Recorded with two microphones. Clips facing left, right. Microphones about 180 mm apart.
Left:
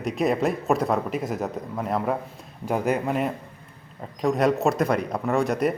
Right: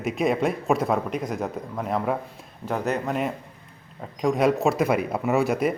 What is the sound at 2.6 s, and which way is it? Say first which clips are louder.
Speech: left 2 dB; 10° left (ahead or behind).